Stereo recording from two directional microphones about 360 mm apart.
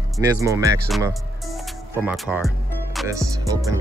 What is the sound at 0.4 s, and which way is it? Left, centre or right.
Speech, centre.